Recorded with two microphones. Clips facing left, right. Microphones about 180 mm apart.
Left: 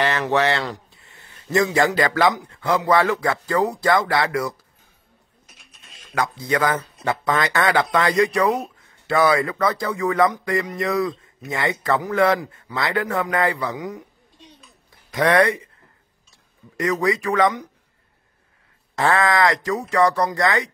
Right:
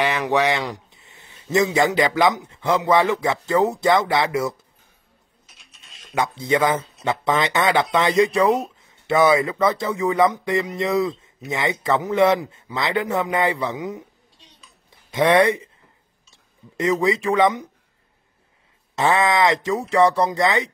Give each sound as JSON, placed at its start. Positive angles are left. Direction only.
{"t": 0.0, "sound": "speech", "side_deg": -10}
{"t": 6.1, "sound": "speech", "side_deg": -25}
{"t": 18.9, "sound": "speech", "side_deg": -20}